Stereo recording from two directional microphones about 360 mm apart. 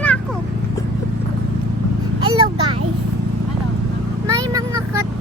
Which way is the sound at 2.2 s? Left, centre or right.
Centre.